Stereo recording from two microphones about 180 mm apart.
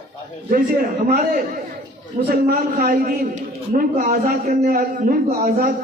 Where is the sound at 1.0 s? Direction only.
55° right (ahead or behind).